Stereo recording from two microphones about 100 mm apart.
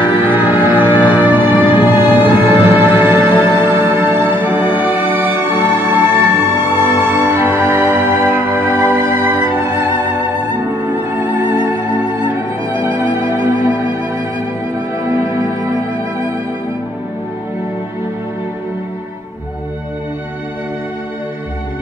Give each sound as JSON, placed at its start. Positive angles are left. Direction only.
{"t": 0.2, "sound": "music", "side_deg": -20}